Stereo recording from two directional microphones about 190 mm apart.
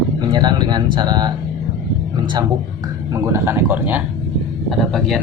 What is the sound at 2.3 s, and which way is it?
A man's voice, 20° right (ahead or behind).